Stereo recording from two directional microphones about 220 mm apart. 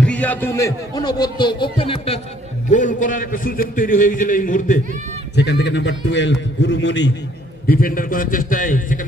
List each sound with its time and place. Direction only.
0.0 s a man's voice: 5° left (ahead or behind); by 2.1 s 25° left (ahead or behind)
2.7 s a man's voice: 35° left (ahead or behind)
5.3 s a man's voice: 50° left (ahead or behind)
7.6 s a man's voice: 40° left (ahead or behind)